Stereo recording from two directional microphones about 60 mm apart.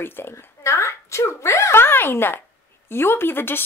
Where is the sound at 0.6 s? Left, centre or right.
Left.